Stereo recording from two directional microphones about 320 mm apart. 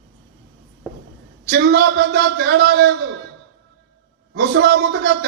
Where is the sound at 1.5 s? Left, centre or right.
Right.